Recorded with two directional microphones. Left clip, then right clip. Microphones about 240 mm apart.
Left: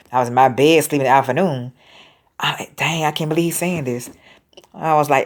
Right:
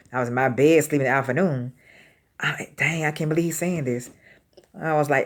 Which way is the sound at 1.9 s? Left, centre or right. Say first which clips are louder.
Left 8 dB; left.